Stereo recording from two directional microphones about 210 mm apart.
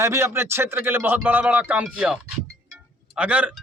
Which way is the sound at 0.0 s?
15° right (ahead or behind).